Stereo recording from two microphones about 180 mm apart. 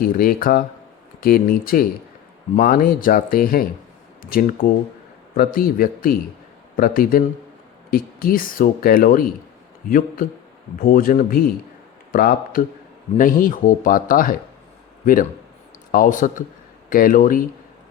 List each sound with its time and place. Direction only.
0.0 s speech: 55° left (ahead or behind)
10.8 s speech: 50° left (ahead or behind)